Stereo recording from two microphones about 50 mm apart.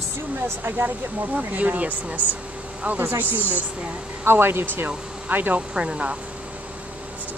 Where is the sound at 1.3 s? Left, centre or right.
Right.